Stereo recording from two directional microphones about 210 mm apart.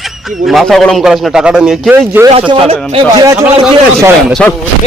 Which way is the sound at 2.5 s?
25° right (ahead or behind).